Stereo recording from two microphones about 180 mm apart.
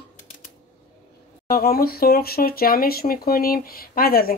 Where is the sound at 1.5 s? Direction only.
55° left (ahead or behind).